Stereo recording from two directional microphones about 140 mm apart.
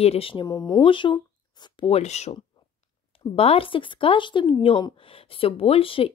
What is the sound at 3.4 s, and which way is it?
A woman's voice, 45° left (ahead or behind).